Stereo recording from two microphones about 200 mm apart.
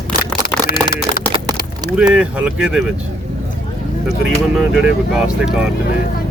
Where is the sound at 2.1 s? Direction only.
5° right (ahead or behind).